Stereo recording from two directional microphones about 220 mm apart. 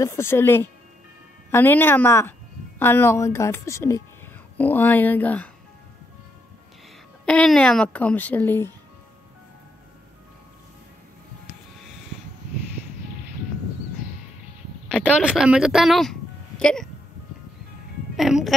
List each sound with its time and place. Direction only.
0.0 s a child's voice: 10° left (ahead or behind)
7.2 s a child's voice: 5° left (ahead or behind)
14.9 s a woman's voice: 5° left (ahead or behind)
18.1 s speech: centre (ahead or behind)